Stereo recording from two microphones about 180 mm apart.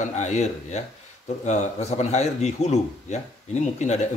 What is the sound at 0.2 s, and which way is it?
A man's voice, 40° left (ahead or behind).